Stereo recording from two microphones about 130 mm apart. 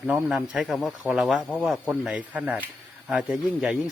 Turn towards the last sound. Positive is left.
turn(degrees=-5)  # may be behind; listen again after turning